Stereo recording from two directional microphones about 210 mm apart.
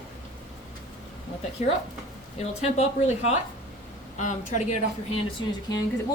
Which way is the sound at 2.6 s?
30° left (ahead or behind).